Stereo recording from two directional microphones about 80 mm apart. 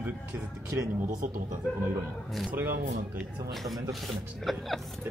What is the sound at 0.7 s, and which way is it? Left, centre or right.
Speech, right.